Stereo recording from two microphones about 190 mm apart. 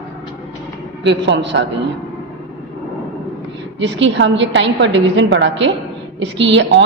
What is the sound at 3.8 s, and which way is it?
A woman's voice, 70° right (ahead or behind).